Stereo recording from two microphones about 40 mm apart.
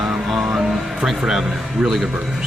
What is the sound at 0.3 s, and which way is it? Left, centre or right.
Music, centre.